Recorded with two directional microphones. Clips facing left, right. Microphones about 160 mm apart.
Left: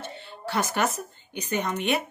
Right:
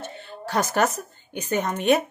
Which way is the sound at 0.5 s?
40° right (ahead or behind).